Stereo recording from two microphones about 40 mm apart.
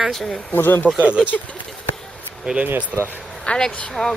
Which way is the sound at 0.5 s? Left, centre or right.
Left.